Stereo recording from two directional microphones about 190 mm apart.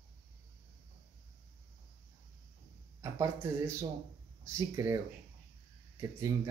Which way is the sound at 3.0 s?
15° right (ahead or behind).